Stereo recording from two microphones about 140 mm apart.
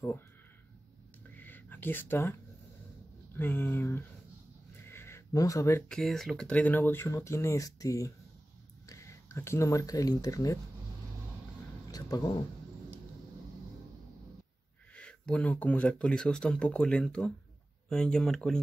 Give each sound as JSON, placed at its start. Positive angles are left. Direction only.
{"t": 1.3, "sound": "a sound", "side_deg": 15}
{"t": 3.3, "sound": "speech", "side_deg": 15}
{"t": 4.8, "sound": "a sound", "side_deg": 15}
{"t": 5.9, "sound": "speech", "side_deg": 5}
{"t": 11.9, "sound": "speech", "side_deg": 25}
{"t": 15.0, "sound": "speech", "side_deg": 10}